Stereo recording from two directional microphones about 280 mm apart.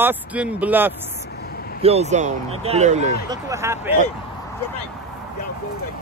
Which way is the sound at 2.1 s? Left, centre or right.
Right.